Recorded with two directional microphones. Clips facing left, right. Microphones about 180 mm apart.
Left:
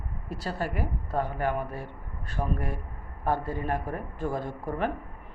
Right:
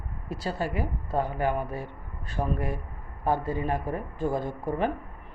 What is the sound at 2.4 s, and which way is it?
Speech, 20° right (ahead or behind).